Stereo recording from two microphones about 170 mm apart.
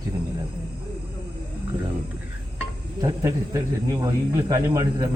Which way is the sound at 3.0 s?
20° right (ahead or behind).